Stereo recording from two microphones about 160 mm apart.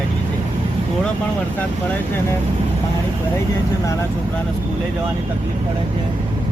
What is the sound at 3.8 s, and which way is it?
Speech, 20° left (ahead or behind).